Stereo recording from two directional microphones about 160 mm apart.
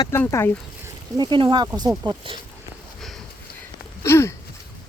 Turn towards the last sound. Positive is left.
turn(degrees=15)  # may be behind; listen again after turning